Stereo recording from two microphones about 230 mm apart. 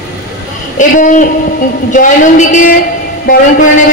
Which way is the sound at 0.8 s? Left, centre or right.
Left.